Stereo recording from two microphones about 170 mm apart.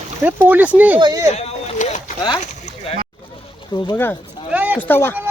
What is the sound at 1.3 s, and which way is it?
Boat, 40° left (ahead or behind).